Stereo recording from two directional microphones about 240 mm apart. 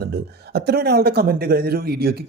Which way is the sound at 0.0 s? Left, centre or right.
Right.